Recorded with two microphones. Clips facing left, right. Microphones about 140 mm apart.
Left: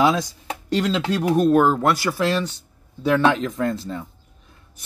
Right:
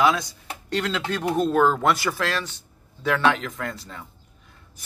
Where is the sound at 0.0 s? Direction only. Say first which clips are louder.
Left 2 dB; 20° left (ahead or behind).